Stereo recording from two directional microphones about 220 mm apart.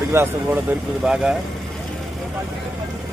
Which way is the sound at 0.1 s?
10° right (ahead or behind).